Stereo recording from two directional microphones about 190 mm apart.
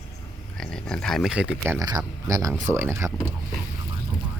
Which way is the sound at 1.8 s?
20° right (ahead or behind).